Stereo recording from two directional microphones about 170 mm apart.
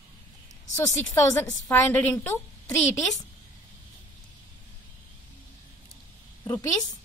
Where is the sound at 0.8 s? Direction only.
15° left (ahead or behind).